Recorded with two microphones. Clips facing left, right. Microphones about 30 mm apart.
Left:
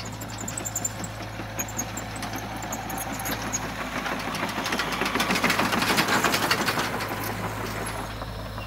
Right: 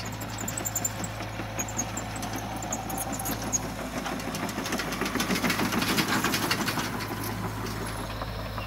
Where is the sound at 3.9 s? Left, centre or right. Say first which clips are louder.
Left 4 dB; left.